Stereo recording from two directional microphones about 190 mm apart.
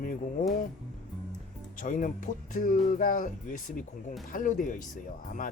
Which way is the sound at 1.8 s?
45° left (ahead or behind).